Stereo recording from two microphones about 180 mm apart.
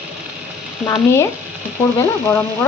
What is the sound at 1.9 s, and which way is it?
Speech, 15° left (ahead or behind).